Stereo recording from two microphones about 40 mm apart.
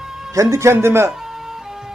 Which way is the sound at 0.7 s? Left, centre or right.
Right.